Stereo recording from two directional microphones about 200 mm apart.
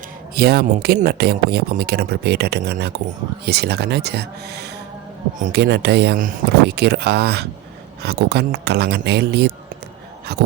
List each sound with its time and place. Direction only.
0.3 s speech: 50° right (ahead or behind)